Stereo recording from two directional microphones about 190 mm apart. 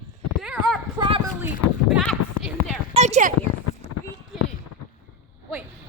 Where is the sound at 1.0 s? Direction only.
25° right (ahead or behind).